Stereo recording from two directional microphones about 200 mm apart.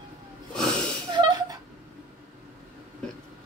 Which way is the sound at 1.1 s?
20° right (ahead or behind).